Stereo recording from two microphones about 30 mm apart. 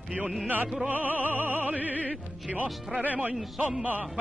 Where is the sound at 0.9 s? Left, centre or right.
Right.